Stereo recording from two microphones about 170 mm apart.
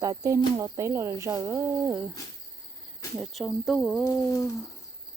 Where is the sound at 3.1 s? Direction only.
Centre (ahead or behind).